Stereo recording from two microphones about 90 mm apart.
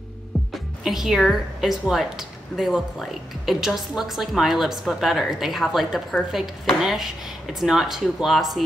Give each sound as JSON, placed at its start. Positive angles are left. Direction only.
{"t": 0.3, "sound": "music", "side_deg": 5}
{"t": 0.8, "sound": "a woman's voice", "side_deg": -5}